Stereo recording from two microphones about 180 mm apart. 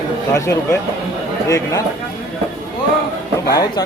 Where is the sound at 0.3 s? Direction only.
15° left (ahead or behind).